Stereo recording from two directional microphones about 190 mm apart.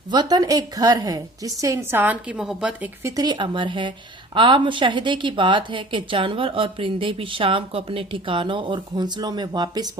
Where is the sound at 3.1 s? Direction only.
20° right (ahead or behind).